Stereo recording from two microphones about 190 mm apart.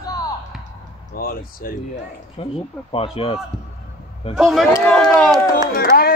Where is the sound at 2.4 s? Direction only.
30° left (ahead or behind).